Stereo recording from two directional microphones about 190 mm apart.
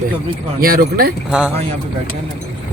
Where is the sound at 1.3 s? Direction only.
5° right (ahead or behind).